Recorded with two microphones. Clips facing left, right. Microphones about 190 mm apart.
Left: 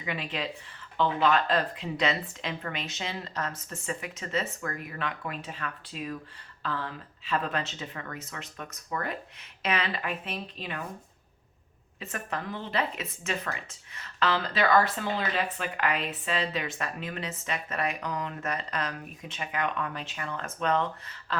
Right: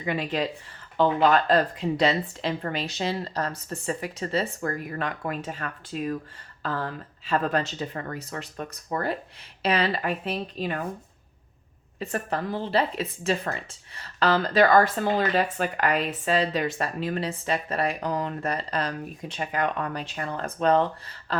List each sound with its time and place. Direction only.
0.0 s speech: 40° right (ahead or behind)
11.9 s speech: 35° right (ahead or behind)